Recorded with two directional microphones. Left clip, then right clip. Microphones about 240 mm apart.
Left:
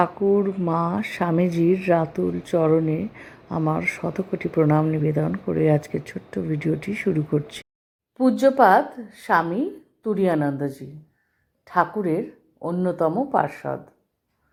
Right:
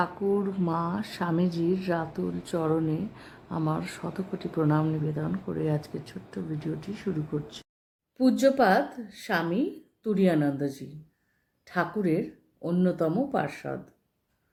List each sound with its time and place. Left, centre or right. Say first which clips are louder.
0.0 s speech: left 7 dB; centre
8.2 s a woman's voice: left 6 dB; centre